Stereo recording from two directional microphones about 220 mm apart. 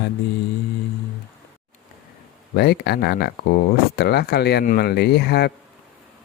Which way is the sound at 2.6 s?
45° left (ahead or behind).